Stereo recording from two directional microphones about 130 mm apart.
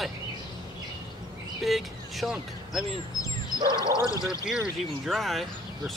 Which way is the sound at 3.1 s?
25° left (ahead or behind).